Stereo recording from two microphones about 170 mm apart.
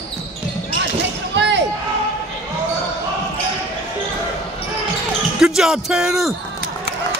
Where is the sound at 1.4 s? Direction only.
90° right.